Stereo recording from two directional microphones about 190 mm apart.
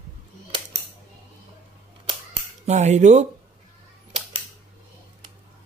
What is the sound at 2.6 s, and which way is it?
Speech, 35° right (ahead or behind).